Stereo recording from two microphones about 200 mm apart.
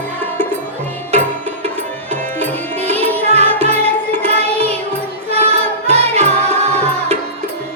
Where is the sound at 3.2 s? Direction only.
30° right (ahead or behind).